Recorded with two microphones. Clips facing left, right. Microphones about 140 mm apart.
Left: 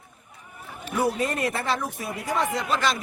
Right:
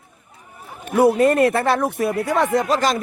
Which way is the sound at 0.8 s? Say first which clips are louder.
Right 10 dB; 60° right (ahead or behind).